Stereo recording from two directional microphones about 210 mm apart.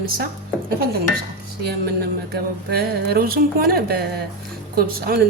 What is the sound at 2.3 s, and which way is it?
A woman's voice, 45° right (ahead or behind).